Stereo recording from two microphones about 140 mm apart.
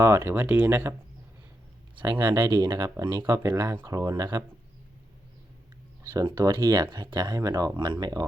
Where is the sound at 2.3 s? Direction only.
30° right (ahead or behind).